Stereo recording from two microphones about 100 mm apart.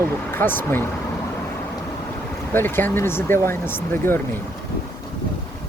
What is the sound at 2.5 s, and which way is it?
Speech, 20° left (ahead or behind).